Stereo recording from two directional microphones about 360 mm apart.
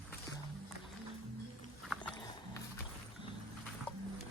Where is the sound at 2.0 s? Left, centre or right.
Centre.